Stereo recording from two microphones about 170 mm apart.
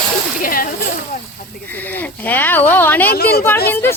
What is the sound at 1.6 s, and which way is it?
Speech, 10° left (ahead or behind).